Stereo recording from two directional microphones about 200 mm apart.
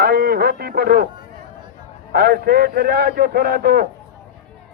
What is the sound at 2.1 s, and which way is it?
A man's voice, 50° right (ahead or behind).